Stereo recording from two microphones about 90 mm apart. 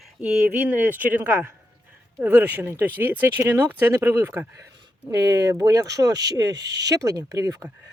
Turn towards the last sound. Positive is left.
turn(degrees=-35)  # may be behind; listen again after turning